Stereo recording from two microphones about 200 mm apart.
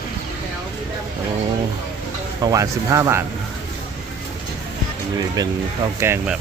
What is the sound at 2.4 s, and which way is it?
Speech, 15° right (ahead or behind).